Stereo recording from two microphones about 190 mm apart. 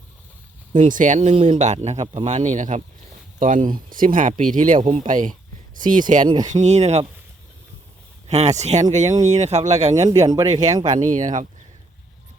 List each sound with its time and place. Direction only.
0.7 s speech: 45° right (ahead or behind)
6.2 s speech: 20° right (ahead or behind)
6.5 s speech: 40° right (ahead or behind)
8.3 s speech: 35° right (ahead or behind)
9.9 s speech: 15° right (ahead or behind)
10.8 s speech: 40° right (ahead or behind)